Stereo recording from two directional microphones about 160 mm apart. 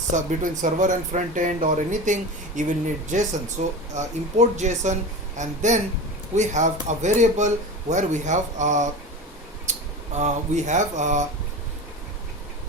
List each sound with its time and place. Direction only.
0.3 s speech: 50° right (ahead or behind)
9.7 s a sound: 45° right (ahead or behind)
10.2 s speech: 50° right (ahead or behind)